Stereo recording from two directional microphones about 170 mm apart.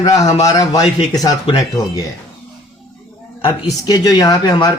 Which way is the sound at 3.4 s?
25° left (ahead or behind).